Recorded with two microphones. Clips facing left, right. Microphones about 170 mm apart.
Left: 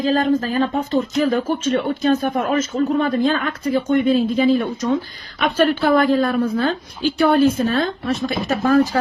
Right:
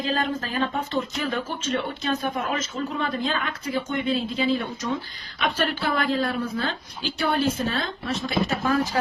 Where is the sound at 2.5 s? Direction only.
50° left (ahead or behind).